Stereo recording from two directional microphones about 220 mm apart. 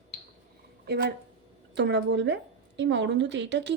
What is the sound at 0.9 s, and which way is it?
A woman's voice, 50° right (ahead or behind).